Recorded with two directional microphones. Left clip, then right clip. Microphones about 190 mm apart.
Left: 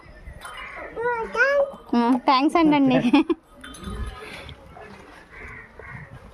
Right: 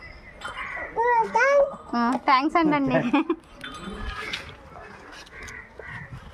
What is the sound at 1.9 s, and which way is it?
A woman's voice, 50° left (ahead or behind).